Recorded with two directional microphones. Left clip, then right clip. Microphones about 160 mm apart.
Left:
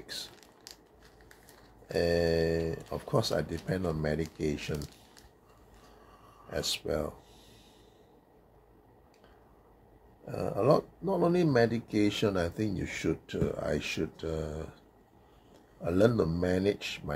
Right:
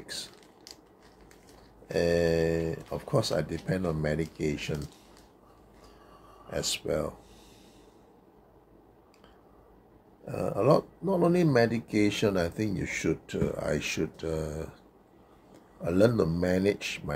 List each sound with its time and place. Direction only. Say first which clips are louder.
0.0 s mechanisms: right 2 dB; 5° right (ahead or behind)
1.9 s speech: right 2 dB; 5° right (ahead or behind)
6.5 s speech: right 2 dB; 5° right (ahead or behind)
10.2 s speech: right 2 dB; 5° right (ahead or behind)
15.8 s speech: right 2 dB; 5° right (ahead or behind)